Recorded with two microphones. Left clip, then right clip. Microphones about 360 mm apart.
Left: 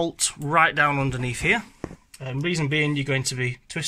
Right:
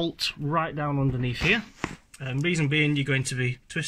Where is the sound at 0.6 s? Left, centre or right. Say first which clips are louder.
Left 9 dB; left.